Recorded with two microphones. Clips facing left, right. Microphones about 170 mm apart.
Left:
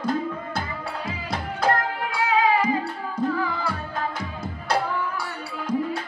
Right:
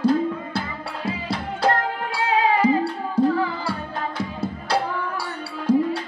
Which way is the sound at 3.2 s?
30° right (ahead or behind).